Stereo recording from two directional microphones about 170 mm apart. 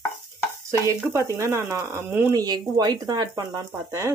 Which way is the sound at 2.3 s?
25° right (ahead or behind).